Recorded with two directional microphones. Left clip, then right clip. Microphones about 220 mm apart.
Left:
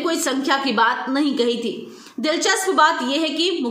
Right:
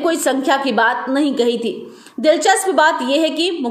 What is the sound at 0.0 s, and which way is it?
A woman's voice, 10° right (ahead or behind).